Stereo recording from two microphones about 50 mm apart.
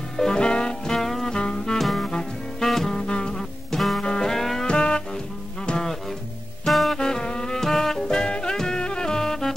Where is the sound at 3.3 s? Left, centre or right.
Centre.